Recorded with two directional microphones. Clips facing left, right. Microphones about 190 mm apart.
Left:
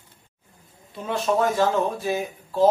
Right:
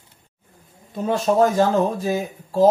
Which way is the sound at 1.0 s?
40° right (ahead or behind).